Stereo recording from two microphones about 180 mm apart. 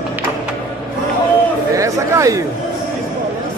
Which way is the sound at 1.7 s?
15° right (ahead or behind).